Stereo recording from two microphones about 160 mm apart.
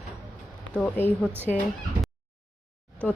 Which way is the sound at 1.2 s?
15° right (ahead or behind).